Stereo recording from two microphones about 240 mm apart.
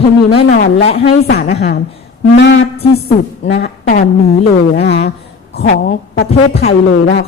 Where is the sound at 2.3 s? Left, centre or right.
Left.